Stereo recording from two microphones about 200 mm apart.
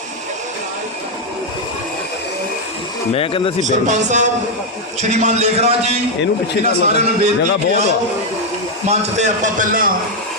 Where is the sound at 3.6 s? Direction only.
35° right (ahead or behind).